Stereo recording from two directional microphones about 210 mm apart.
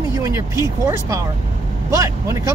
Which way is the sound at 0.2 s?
15° right (ahead or behind).